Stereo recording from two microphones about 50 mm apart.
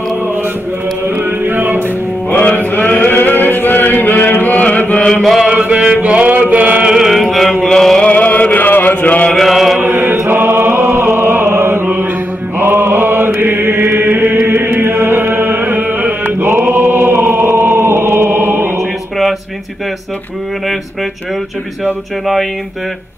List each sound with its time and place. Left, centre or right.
1.0 s music: right
2.5 s chant: left
5.4 s music: right
5.9 s chant: right
6.9 s chant: centre
8.0 s a sound: left
9.3 s chant: centre
9.8 s mantra: right
10.3 s chant: right
12.5 s mantra: right
13.4 s chant: right
22.2 s speech: centre